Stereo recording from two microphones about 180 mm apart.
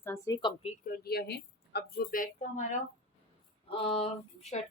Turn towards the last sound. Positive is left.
turn(degrees=40)  # may be behind; listen again after turning